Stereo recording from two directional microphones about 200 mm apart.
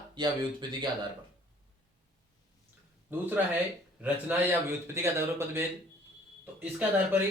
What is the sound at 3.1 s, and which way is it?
A man's voice, 10° right (ahead or behind).